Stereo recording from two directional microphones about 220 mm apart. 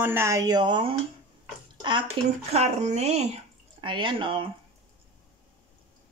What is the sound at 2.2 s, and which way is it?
Speech, 20° right (ahead or behind).